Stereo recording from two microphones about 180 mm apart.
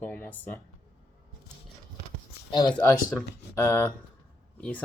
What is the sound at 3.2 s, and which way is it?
Speech, 15° left (ahead or behind).